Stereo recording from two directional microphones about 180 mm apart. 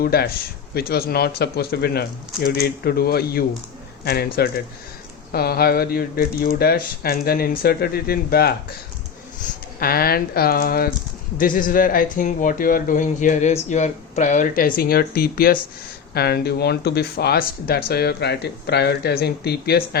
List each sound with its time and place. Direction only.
0.0 s speech: 60° left (ahead or behind)
5.3 s speech: 60° left (ahead or behind)
9.8 s speech: 55° left (ahead or behind)